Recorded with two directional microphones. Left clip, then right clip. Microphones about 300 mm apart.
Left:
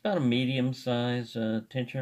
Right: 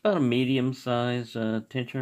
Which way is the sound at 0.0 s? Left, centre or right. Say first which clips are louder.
Right 4 dB; right.